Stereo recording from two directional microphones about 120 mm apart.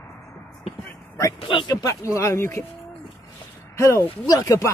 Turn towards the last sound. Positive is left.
turn(degrees=25)  # may be behind; listen again after turning